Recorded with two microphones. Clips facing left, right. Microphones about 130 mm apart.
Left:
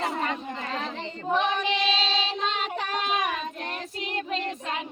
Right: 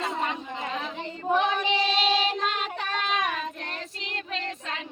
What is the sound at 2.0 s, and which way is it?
Child singing, 15° right (ahead or behind).